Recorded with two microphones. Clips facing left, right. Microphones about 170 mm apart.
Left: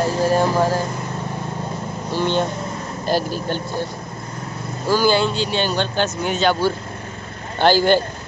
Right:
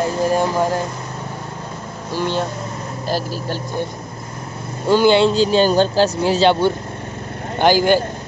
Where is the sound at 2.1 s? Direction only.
5° right (ahead or behind).